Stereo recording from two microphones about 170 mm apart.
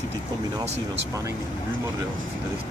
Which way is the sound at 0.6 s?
40° right (ahead or behind).